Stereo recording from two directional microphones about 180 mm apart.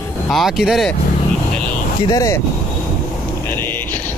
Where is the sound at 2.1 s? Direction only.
20° left (ahead or behind).